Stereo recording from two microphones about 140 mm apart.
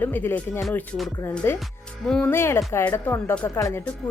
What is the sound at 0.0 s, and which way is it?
Speech, 15° left (ahead or behind).